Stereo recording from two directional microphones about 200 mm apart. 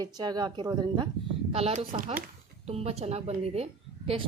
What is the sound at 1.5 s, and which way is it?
A woman's voice, 30° right (ahead or behind).